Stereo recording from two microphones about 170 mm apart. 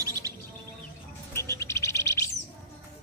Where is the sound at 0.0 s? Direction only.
20° right (ahead or behind).